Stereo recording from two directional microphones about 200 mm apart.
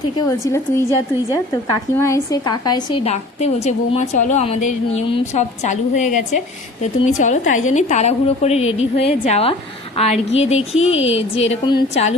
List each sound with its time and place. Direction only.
0.3 s a woman's voice: 15° left (ahead or behind)